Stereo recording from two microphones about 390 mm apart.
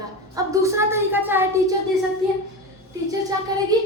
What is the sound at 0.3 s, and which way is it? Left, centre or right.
A woman's voice, centre.